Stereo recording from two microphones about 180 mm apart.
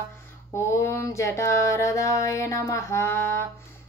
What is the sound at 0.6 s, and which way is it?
Mantra, 15° left (ahead or behind).